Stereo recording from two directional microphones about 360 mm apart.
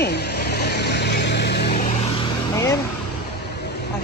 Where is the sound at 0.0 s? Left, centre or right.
Left.